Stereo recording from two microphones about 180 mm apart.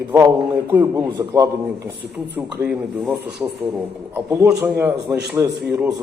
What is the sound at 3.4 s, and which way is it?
A man's voice, 5° right (ahead or behind).